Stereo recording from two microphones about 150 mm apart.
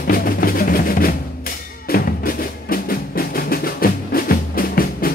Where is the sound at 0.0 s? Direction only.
80° left.